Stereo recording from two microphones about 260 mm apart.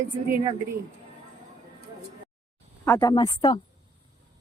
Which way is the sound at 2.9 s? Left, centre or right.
Centre.